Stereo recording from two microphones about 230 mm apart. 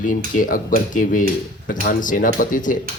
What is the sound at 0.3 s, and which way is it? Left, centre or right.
A man's voice, left.